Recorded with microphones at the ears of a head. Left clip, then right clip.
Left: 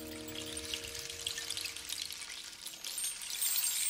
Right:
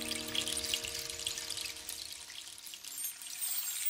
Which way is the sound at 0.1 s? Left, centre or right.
Right.